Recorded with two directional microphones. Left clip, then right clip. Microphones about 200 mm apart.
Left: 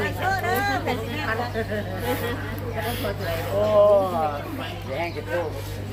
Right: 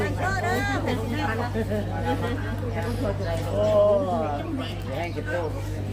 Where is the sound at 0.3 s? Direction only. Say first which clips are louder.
Left 4 dB; 50° left (ahead or behind).